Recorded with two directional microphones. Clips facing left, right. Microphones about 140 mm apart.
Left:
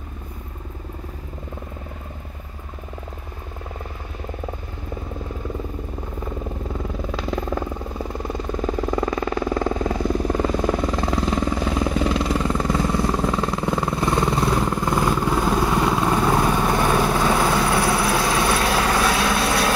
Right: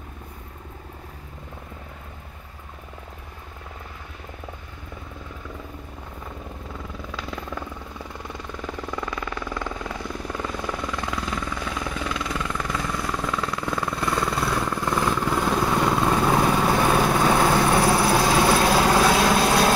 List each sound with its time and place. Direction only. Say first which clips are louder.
7.1 s vehicle: left 8 dB; 35° left (ahead or behind); by 17.5 s 10° right (ahead or behind)
17.7 s vehicle: right 1 dB; 25° right (ahead or behind)